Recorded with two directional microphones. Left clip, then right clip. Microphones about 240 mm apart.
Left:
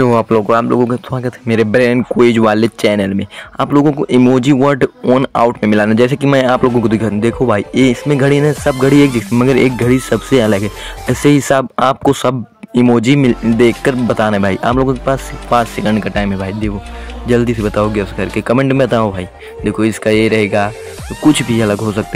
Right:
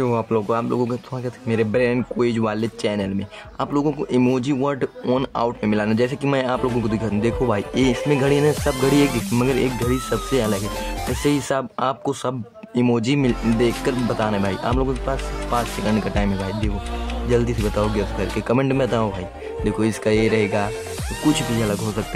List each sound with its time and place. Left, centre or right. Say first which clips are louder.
0.0 s speech: left 10 dB; left
17.3 s speech: left 8 dB; left